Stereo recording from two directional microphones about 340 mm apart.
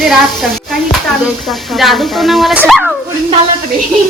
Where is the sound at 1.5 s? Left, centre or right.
Centre.